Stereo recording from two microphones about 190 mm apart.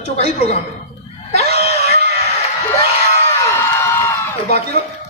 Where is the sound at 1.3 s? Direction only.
35° left (ahead or behind).